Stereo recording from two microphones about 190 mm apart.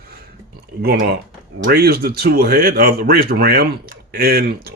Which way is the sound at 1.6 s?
55° right (ahead or behind).